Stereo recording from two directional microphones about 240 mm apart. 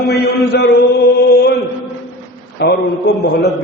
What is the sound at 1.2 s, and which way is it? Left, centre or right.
Chant, left.